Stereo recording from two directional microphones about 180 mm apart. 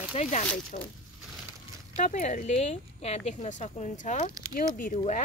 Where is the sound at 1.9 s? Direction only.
40° left (ahead or behind).